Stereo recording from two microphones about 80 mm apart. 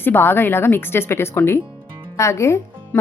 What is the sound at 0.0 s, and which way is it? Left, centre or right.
A woman's voice, left.